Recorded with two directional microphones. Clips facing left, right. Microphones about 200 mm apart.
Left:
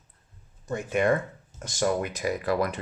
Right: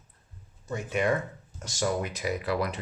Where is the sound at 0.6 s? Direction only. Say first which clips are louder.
Left 3 dB; 50° left (ahead or behind).